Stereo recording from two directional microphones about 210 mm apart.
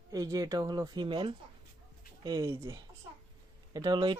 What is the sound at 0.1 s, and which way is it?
Speech, 15° right (ahead or behind).